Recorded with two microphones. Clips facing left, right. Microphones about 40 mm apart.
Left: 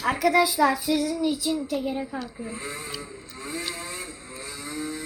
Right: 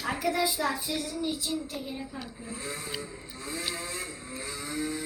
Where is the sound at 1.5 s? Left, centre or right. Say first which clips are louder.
Left 7 dB; left.